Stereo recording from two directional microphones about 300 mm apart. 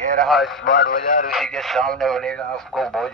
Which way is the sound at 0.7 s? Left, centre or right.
Left.